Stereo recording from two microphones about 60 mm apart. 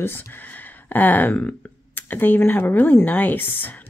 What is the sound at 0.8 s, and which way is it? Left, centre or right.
Speech, left.